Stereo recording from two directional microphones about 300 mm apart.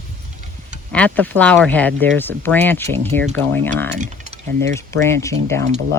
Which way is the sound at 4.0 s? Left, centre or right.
Right.